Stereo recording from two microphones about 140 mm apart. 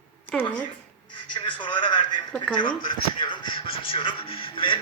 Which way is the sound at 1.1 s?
35° left (ahead or behind).